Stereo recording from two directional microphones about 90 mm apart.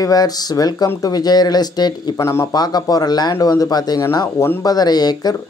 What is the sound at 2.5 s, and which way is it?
Speech, 50° left (ahead or behind).